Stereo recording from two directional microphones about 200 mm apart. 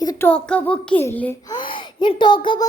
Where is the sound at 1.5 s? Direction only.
25° left (ahead or behind).